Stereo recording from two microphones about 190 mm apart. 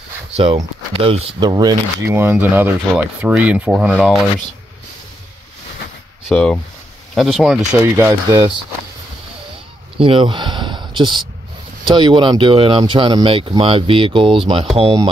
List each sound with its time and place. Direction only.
0.4 s speech: 30° right (ahead or behind); by 4.2 s 5° right (ahead or behind)
6.2 s speech: 5° left (ahead or behind)
7.7 s speech: 10° right (ahead or behind)
9.9 s speech: 25° right (ahead or behind)